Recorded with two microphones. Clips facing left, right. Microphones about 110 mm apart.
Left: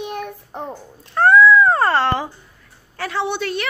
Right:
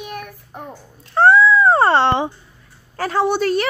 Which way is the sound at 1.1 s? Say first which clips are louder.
Even; 25° right (ahead or behind).